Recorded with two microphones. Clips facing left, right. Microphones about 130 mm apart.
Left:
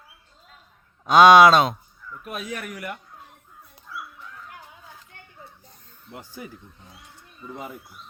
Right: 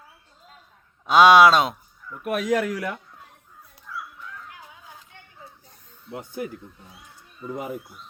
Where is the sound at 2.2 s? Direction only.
80° right.